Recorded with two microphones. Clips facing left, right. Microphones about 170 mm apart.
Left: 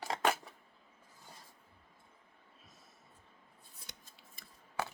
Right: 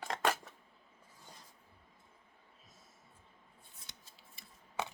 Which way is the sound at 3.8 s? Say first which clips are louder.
Left 4 dB; 50° left (ahead or behind).